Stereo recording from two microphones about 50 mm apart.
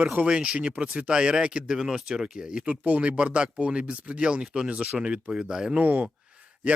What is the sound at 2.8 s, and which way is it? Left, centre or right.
Speech, right.